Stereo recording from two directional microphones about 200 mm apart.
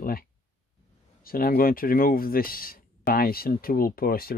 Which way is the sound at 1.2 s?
45° left (ahead or behind).